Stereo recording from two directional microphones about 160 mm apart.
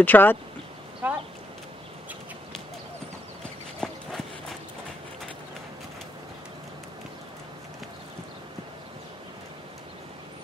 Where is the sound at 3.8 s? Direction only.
5° left (ahead or behind).